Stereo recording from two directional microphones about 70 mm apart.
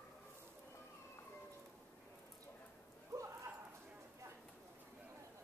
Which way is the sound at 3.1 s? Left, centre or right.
Right.